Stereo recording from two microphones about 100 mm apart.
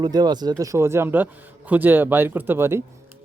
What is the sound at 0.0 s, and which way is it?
Speech, 45° right (ahead or behind).